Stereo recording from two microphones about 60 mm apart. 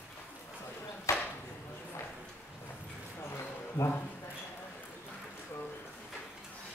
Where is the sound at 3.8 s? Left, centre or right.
Left.